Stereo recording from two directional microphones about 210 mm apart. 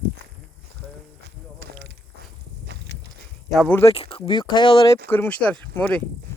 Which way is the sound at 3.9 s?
25° left (ahead or behind).